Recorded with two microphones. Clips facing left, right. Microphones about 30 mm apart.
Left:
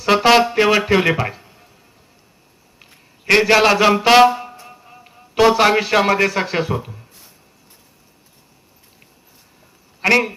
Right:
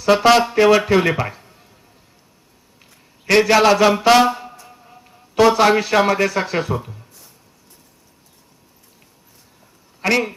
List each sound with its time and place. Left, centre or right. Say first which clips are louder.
0.0 s music: even; centre
0.5 s a man's voice: right 1 dB; centre
3.2 s a man's voice: even; centre
10.0 s speech: left 3 dB; left